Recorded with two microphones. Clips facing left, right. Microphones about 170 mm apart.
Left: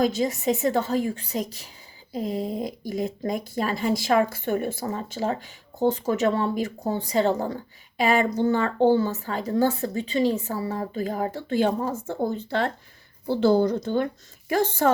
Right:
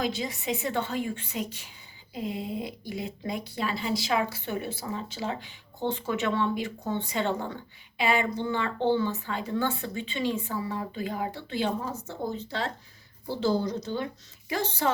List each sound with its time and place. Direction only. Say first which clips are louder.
0.0 s a woman's voice: left 8 dB; 45° left (ahead or behind)